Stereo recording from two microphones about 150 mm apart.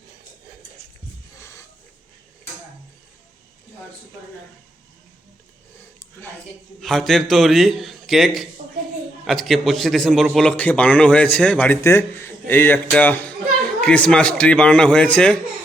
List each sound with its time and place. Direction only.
1.4 s wheeze: 20° left (ahead or behind)
6.7 s a man's voice: centre (ahead or behind)